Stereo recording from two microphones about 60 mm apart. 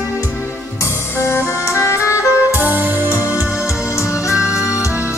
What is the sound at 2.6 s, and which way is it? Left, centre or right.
Music, right.